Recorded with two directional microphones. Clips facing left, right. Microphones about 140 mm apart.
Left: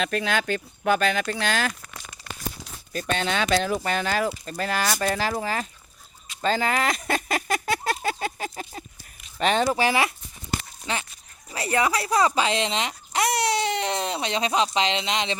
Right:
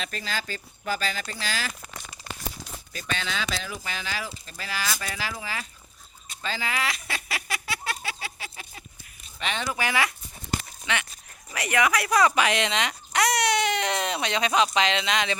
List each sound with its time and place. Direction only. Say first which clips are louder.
0.0 s speech: left 8 dB; 60° left (ahead or behind)
2.9 s speech: left 7 dB; 50° left (ahead or behind)
6.4 s a sound: left 7 dB; 45° left (ahead or behind)
9.4 s speech: left 9 dB; 40° left (ahead or behind)
9.7 s speech: left 4 dB; 25° left (ahead or behind)
10.9 s speech: even; 35° left (ahead or behind)